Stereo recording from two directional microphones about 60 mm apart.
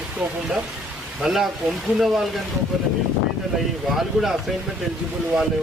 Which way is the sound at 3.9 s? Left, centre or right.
Centre.